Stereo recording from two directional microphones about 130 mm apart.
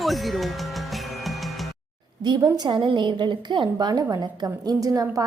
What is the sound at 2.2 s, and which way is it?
A woman's voice, 35° right (ahead or behind).